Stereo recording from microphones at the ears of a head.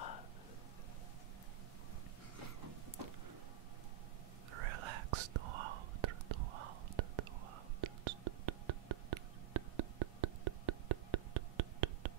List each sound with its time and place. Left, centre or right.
4.5 s whispering: right
7.8 s music: right